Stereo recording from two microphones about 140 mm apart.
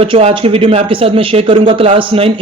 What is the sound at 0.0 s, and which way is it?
Speech, 40° right (ahead or behind).